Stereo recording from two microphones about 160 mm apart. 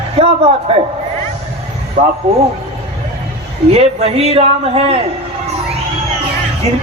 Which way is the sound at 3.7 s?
40° right (ahead or behind).